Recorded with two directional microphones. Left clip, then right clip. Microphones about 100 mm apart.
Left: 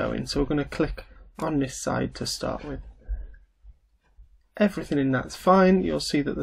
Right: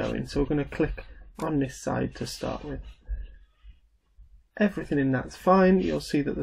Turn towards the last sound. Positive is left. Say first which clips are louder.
# left 2 dB
turn(degrees=15)  # may be behind; listen again after turning